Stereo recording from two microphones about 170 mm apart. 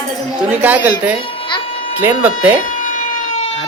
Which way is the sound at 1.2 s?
30° left (ahead or behind).